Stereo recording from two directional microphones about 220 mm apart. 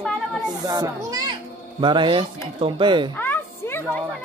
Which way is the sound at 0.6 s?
15° right (ahead or behind).